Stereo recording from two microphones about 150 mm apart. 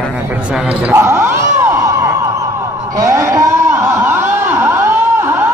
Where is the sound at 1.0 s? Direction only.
20° right (ahead or behind).